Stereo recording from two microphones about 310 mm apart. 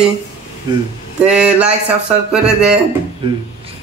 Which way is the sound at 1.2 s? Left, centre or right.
Centre.